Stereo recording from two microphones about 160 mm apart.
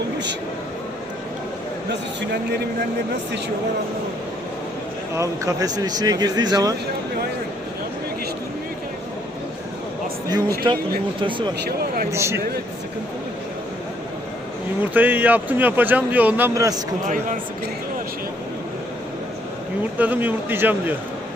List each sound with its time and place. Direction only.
1.9 s a man's voice: 90° right
5.1 s speech: 20° right (ahead or behind)
10.6 s speech: 30° right (ahead or behind)
12.1 s speech: 15° right (ahead or behind)
14.9 s speech: 10° right (ahead or behind)
16.6 s speech: 20° right (ahead or behind)
17.1 s speech: 50° right (ahead or behind)
20.0 s speech: 10° right (ahead or behind)